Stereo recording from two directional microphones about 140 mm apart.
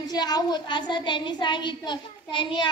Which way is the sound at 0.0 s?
30° left (ahead or behind).